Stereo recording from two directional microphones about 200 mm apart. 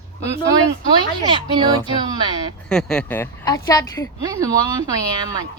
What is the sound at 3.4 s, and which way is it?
Speech, 20° left (ahead or behind).